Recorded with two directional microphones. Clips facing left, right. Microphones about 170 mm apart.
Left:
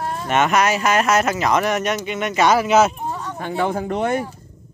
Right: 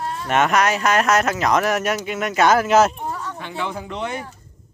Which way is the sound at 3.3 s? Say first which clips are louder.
Left 6 dB; 45° left (ahead or behind).